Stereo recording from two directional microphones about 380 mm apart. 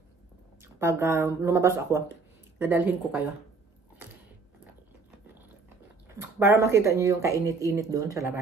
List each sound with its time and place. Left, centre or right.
0.6 s speech: centre
6.2 s speech: centre